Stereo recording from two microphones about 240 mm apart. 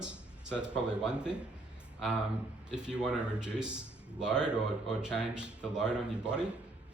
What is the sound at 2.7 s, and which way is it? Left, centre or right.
Speech, centre.